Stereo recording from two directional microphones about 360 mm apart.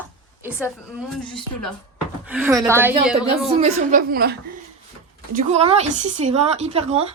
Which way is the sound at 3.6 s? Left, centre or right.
Right.